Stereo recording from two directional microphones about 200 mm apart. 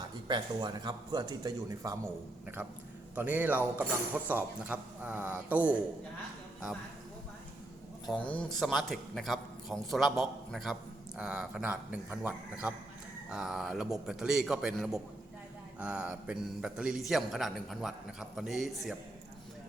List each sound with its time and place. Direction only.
0.3 s speech: 20° right (ahead or behind)
2.6 s speech: 5° right (ahead or behind)
8.0 s a man's voice: 5° left (ahead or behind)